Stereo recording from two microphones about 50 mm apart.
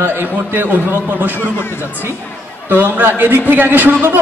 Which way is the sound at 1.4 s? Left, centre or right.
Left.